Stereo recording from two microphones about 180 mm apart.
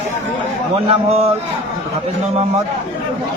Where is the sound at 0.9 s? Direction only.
35° right (ahead or behind).